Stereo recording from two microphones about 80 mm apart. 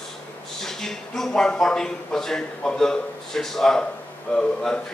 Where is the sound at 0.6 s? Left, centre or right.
Centre.